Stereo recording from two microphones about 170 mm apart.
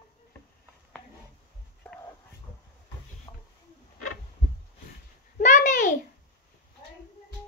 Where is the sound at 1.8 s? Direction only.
5° left (ahead or behind).